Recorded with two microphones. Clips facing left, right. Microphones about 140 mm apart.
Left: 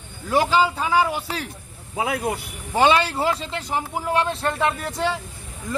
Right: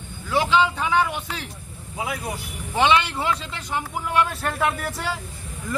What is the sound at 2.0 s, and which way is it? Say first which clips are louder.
Speech: left 5 dB; 70° left (ahead or behind).